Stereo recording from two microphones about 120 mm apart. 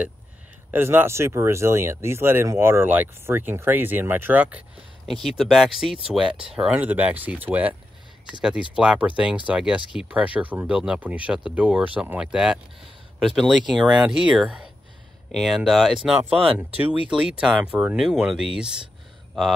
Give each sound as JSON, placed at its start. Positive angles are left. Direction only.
{"t": 0.7, "sound": "speech", "side_deg": -15}
{"t": 5.0, "sound": "speech", "side_deg": 0}